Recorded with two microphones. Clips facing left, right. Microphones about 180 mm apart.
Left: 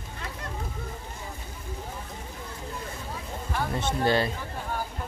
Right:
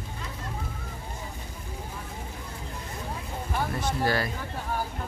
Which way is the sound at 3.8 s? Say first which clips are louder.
Left 4 dB; 25° left (ahead or behind).